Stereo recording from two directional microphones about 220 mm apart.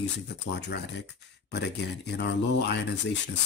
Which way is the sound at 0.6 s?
50° left (ahead or behind).